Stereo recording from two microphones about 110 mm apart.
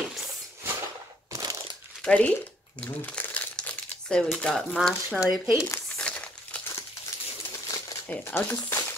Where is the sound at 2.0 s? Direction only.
10° left (ahead or behind).